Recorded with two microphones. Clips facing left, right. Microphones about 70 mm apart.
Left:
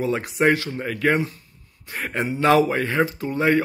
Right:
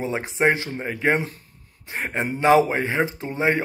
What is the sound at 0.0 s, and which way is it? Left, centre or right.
Speech, right.